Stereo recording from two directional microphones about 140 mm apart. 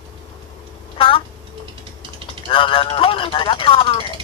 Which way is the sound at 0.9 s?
40° left (ahead or behind).